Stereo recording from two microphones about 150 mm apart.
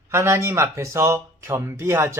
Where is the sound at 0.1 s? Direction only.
20° right (ahead or behind).